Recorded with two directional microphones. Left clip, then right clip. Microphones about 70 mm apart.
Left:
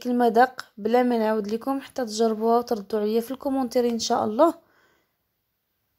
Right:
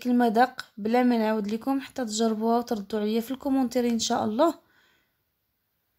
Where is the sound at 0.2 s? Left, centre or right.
Centre.